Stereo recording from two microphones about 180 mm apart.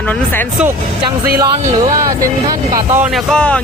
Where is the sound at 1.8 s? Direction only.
20° right (ahead or behind).